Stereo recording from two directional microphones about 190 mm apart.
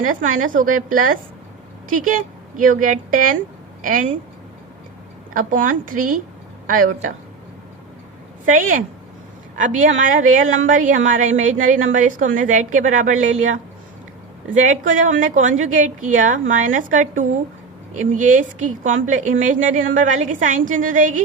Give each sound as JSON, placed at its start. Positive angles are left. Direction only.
{"t": 0.0, "sound": "a woman's voice", "side_deg": -45}
{"t": 5.3, "sound": "a woman's voice", "side_deg": -45}
{"t": 8.4, "sound": "a woman's voice", "side_deg": -45}
{"t": 14.6, "sound": "a woman's voice", "side_deg": -40}